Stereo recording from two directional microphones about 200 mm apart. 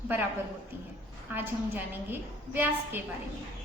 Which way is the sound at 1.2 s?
10° right (ahead or behind).